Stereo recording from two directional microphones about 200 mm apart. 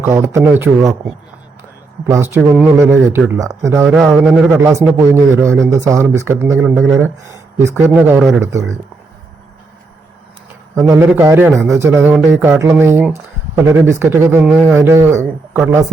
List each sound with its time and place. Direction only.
0.0 s speech: 15° right (ahead or behind)
2.0 s speech: 15° right (ahead or behind)
3.8 s a man's voice: 5° right (ahead or behind)
4.6 s speech: 15° right (ahead or behind)
7.3 s speech: 15° right (ahead or behind)
10.8 s a man's voice: 10° right (ahead or behind)